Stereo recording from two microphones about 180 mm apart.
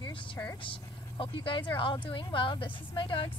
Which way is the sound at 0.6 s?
30° left (ahead or behind).